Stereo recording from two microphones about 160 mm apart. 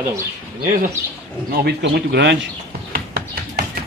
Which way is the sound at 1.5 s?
85° right.